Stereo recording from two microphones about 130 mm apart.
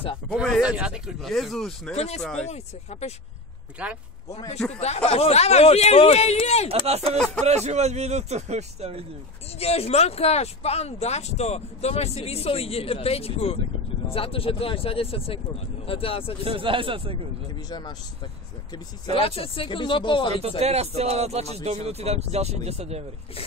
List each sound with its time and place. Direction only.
0.3 s speech: 5° left (ahead or behind)
0.6 s speech: 10° right (ahead or behind)
2.0 s speech: 55° left (ahead or behind)
3.8 s speech: 10° right (ahead or behind)
4.7 s speech: 55° left (ahead or behind)
6.9 s a man's voice: 50° right (ahead or behind)
9.6 s speech: 50° left (ahead or behind)
16.4 s a man's voice: 40° right (ahead or behind)
17.6 s speech: 35° left (ahead or behind)
19.0 s speech: 45° left (ahead or behind)
20.6 s speech: 55° right (ahead or behind)